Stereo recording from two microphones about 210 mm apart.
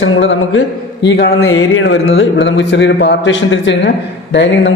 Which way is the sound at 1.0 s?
50° left (ahead or behind).